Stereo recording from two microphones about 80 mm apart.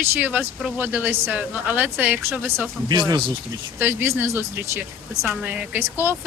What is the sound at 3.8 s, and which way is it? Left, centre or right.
Speech, right.